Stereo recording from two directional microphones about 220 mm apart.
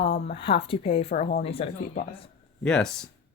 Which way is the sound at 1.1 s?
40° left (ahead or behind).